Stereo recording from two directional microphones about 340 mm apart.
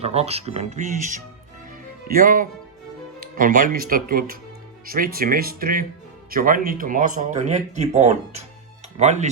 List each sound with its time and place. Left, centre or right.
0.0 s speech: centre